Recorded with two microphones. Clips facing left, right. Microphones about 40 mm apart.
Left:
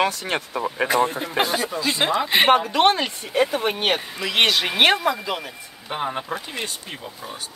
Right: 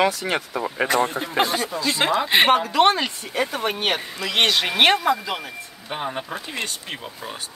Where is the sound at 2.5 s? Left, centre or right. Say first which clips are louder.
Even; centre.